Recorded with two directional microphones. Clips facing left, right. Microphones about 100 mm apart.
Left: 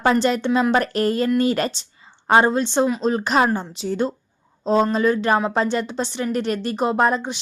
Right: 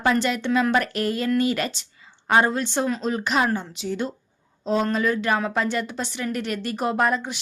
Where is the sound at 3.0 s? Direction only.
35° left (ahead or behind).